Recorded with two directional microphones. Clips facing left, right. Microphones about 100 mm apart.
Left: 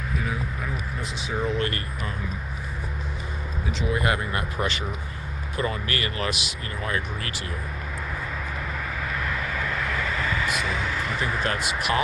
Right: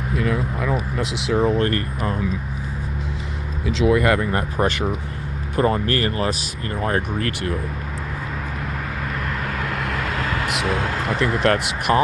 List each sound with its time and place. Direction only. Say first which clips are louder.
0.2 s speech: right 10 dB; 85° right
1.5 s speech: right 7 dB; 45° right (ahead or behind)
3.8 s speech: right 8 dB; 65° right (ahead or behind)
9.2 s vehicle: right 3 dB; 60° right (ahead or behind)